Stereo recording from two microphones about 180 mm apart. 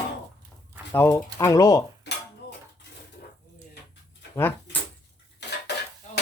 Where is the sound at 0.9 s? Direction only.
15° left (ahead or behind).